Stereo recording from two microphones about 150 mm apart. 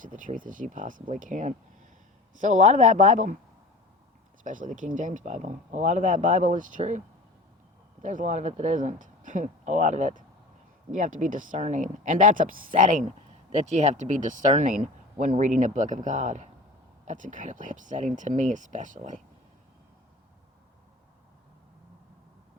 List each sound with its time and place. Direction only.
0.0 s speech: 60° right (ahead or behind)
4.4 s speech: 60° right (ahead or behind)
8.0 s speech: 55° right (ahead or behind)